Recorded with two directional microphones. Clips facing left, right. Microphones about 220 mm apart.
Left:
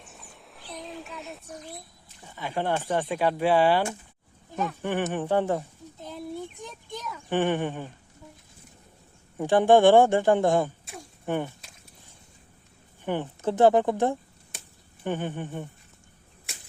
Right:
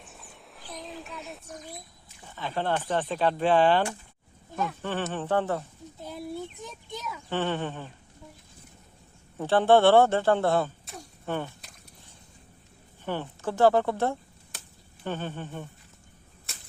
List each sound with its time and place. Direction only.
0.0 s a sound: centre (ahead or behind)
2.2 s speech: 10° left (ahead or behind)
6.0 s a sound: 10° right (ahead or behind)
7.3 s speech: 15° left (ahead or behind)
9.4 s speech: 15° left (ahead or behind)
13.1 s speech: 20° left (ahead or behind)